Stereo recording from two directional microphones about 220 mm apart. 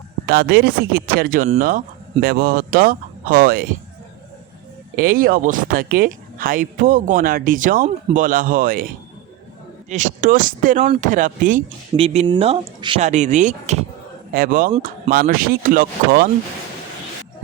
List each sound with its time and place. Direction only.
0.3 s speech: 45° right (ahead or behind)
4.9 s speech: 40° right (ahead or behind)
9.9 s speech: 35° right (ahead or behind)